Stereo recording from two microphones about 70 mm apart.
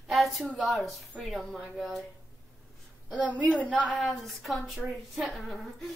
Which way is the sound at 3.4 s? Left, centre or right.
Centre.